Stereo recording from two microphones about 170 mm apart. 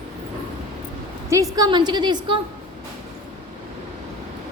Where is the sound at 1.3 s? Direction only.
20° right (ahead or behind).